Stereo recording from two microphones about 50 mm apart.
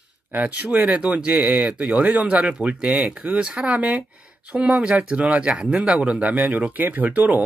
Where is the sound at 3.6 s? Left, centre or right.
Right.